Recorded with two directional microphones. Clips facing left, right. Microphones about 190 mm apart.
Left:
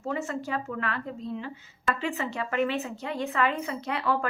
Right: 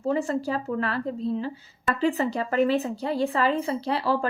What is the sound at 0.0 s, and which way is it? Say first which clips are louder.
A woman's voice: right 6 dB; 35° right (ahead or behind).